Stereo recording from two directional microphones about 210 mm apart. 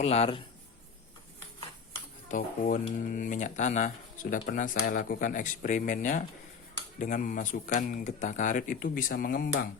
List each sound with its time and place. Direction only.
0.0 s a man's voice: 30° left (ahead or behind)
2.3 s speech: 40° left (ahead or behind)